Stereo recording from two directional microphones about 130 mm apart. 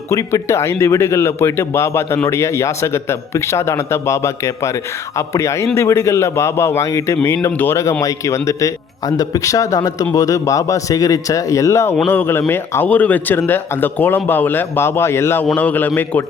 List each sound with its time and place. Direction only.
0.1 s speech: 25° left (ahead or behind)